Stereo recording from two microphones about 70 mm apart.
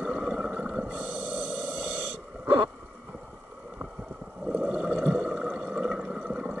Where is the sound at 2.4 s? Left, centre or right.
Right.